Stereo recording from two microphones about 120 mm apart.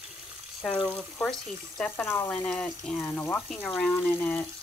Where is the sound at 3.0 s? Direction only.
15° left (ahead or behind).